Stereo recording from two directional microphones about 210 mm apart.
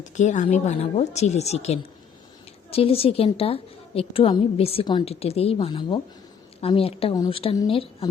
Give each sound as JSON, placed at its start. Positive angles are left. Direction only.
{"t": 0.0, "sound": "a woman's voice", "side_deg": 35}